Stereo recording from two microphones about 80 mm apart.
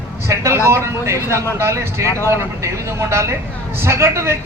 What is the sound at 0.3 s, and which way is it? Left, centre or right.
A man's voice, right.